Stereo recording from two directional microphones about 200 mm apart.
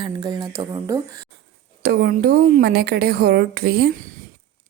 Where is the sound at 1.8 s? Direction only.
45° right (ahead or behind).